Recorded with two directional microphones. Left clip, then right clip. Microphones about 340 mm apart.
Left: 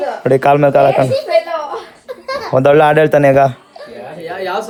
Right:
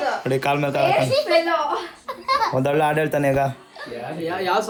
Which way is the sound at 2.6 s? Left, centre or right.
Left.